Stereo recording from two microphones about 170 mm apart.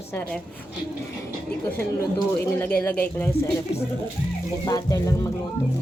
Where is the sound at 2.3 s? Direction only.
10° left (ahead or behind).